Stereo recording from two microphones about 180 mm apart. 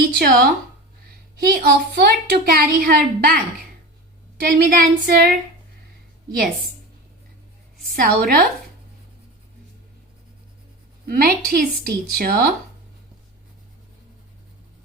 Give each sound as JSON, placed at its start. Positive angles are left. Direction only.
{"t": 0.0, "sound": "a woman's voice", "side_deg": -60}
{"t": 4.4, "sound": "a woman's voice", "side_deg": -55}
{"t": 8.0, "sound": "a woman's voice", "side_deg": -60}
{"t": 11.0, "sound": "a woman's voice", "side_deg": -55}